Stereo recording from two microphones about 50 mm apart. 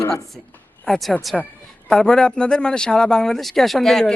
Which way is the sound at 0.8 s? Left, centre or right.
Centre.